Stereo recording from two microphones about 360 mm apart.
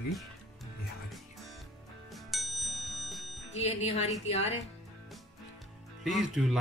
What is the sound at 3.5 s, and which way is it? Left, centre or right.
Speech, centre.